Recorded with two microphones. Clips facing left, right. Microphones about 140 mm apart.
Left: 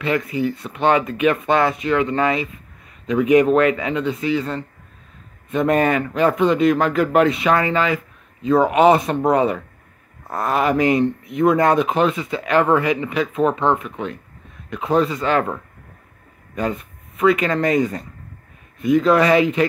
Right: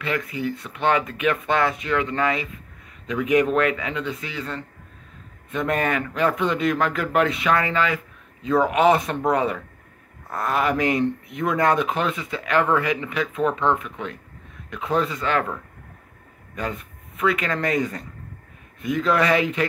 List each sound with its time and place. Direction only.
0.0 s speech: 30° left (ahead or behind)
17.2 s speech: 25° left (ahead or behind)